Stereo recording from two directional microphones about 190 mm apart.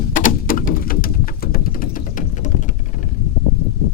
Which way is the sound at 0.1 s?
45° left (ahead or behind).